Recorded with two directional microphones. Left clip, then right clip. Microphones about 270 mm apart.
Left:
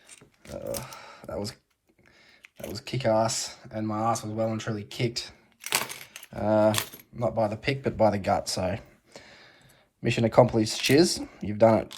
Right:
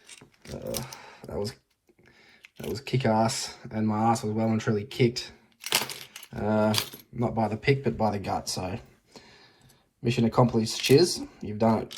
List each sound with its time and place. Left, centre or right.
0.1 s computer keyboard: centre
0.9 s a sound: centre
2.7 s speech: centre
6.3 s speech: centre